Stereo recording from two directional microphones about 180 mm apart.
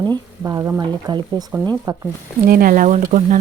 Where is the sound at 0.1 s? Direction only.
20° right (ahead or behind).